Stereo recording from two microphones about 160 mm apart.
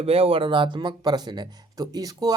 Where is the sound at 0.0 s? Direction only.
35° right (ahead or behind).